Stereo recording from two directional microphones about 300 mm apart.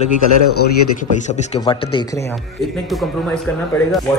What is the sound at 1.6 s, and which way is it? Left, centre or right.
Speech, centre.